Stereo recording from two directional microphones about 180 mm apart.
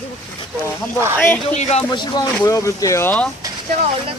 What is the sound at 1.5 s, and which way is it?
Speech, 40° left (ahead or behind).